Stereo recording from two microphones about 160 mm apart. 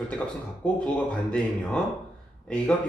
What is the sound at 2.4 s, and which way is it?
Speech, 10° left (ahead or behind).